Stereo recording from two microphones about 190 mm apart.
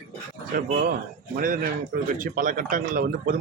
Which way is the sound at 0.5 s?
50° right (ahead or behind).